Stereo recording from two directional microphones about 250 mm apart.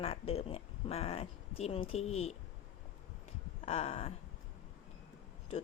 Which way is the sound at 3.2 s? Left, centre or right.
Left.